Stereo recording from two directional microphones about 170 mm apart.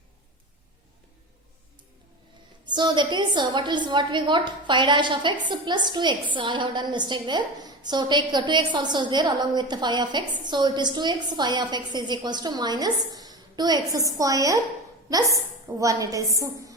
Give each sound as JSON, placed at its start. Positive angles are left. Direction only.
{"t": 2.6, "sound": "a woman's voice", "side_deg": -25}
{"t": 15.8, "sound": "a woman's voice", "side_deg": -20}